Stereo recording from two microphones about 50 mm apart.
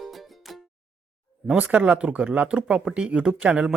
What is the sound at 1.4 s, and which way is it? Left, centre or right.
A man's voice, right.